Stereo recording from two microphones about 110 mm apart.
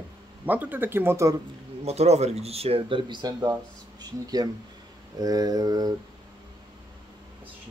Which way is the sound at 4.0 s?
35° right (ahead or behind).